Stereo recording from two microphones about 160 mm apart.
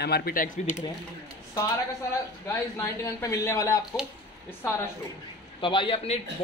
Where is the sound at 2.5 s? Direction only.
20° left (ahead or behind).